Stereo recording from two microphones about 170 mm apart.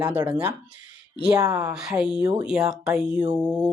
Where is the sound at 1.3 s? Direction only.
20° right (ahead or behind).